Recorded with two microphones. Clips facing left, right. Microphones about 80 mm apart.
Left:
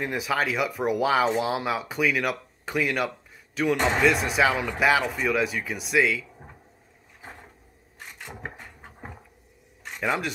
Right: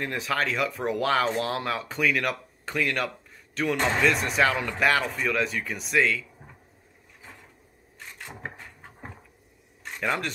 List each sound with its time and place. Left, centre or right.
0.0 s speech: centre
8.2 s a sound: centre
9.8 s speech: centre